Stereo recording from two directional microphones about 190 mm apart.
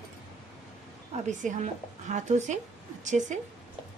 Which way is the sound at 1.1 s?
40° right (ahead or behind).